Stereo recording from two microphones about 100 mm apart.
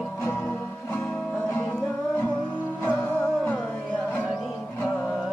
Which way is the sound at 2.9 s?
15° left (ahead or behind).